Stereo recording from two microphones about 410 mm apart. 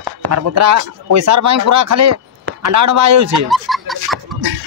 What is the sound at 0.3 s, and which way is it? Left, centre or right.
Speech, right.